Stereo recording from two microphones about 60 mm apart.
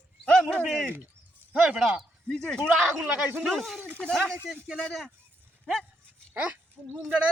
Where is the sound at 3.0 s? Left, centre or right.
Right.